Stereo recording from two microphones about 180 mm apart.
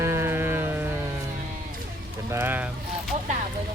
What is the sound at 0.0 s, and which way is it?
Sheep, 15° right (ahead or behind).